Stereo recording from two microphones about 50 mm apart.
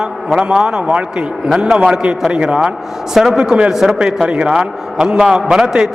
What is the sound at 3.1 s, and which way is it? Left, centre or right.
A man's voice, centre.